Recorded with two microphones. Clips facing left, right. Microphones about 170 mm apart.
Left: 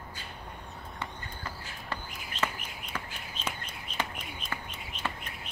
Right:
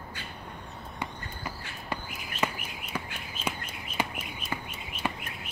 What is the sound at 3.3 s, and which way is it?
Bird, 10° right (ahead or behind).